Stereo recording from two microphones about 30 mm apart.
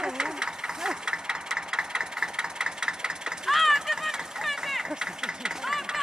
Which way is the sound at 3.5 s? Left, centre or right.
Centre.